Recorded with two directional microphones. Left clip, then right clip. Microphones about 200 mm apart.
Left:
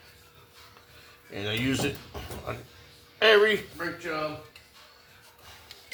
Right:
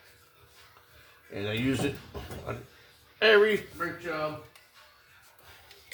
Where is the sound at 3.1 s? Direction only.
25° right (ahead or behind).